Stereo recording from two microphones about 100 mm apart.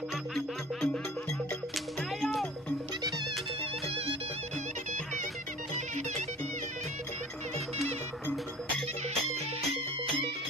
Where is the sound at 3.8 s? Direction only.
65° right (ahead or behind).